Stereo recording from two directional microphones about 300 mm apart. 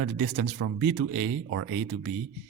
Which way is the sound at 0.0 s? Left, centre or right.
Right.